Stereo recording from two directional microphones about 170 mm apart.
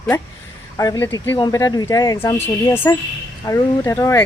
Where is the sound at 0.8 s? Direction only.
20° left (ahead or behind).